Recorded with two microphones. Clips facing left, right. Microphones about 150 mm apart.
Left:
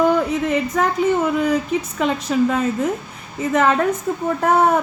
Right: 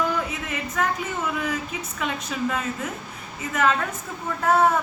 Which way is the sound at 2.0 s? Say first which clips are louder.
Left 9 dB; 40° left (ahead or behind).